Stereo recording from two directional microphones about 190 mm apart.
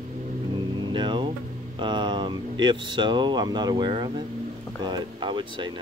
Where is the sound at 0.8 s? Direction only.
25° right (ahead or behind).